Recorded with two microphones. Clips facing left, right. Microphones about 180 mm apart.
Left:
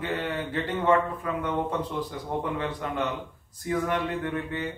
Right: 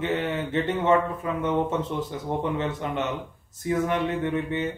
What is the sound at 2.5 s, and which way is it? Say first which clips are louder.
A man's voice: right 2 dB; 25° right (ahead or behind).